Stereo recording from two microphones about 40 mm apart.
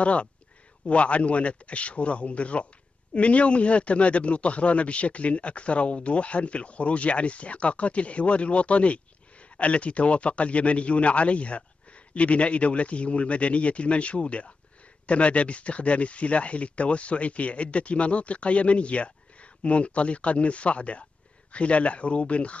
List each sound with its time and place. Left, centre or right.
0.0 s speech: left